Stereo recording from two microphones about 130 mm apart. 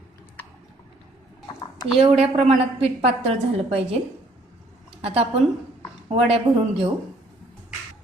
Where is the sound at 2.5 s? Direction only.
55° right (ahead or behind).